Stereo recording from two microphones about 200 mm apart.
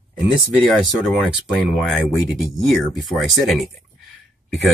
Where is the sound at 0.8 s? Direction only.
Centre (ahead or behind).